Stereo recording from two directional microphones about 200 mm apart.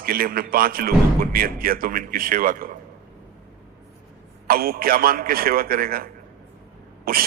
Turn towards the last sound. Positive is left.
turn(degrees=-45)  # may be behind; listen again after turning